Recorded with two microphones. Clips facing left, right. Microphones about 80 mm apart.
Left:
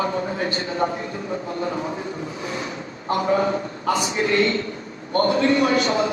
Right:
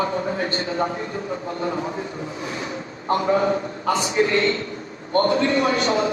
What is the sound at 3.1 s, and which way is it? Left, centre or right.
Speech, right.